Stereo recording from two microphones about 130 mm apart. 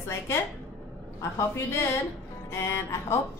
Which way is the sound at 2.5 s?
20° left (ahead or behind).